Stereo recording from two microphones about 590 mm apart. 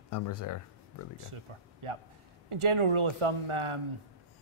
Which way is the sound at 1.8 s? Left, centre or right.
Right.